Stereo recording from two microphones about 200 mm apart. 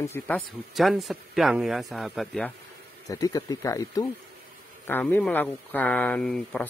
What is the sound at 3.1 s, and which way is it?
Speech, 15° left (ahead or behind).